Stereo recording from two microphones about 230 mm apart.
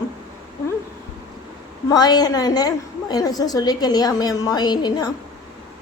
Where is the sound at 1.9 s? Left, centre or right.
Centre.